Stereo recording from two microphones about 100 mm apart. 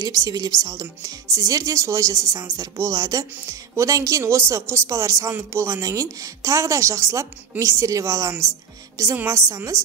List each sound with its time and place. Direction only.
0.0 s a woman's voice: 35° right (ahead or behind)